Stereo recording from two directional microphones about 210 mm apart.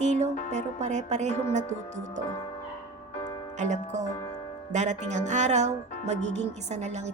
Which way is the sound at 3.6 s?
35° right (ahead or behind).